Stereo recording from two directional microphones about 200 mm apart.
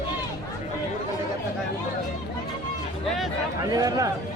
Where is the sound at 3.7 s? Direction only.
20° right (ahead or behind).